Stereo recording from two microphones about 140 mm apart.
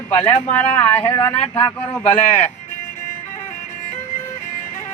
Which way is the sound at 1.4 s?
40° left (ahead or behind).